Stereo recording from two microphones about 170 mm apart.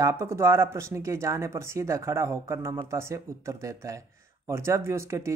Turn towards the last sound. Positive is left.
turn(degrees=-15)  # may be behind; listen again after turning